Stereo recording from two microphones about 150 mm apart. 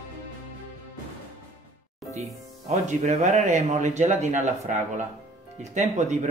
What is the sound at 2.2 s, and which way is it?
Speech, 50° right (ahead or behind).